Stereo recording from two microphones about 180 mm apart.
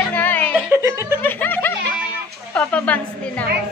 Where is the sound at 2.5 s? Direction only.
10° left (ahead or behind).